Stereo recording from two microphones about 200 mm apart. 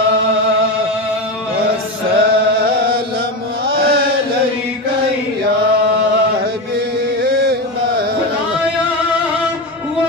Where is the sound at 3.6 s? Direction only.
50° right (ahead or behind).